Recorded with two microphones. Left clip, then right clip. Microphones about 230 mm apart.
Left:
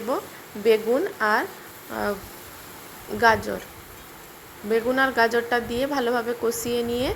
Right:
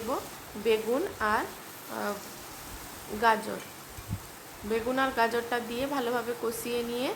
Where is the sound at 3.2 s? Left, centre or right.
Centre.